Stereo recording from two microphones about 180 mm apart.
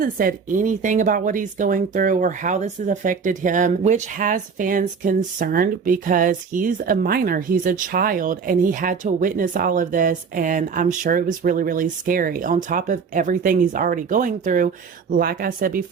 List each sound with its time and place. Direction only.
0.0 s speech: 50° right (ahead or behind)